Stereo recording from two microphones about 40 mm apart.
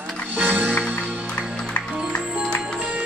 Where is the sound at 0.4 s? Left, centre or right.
Right.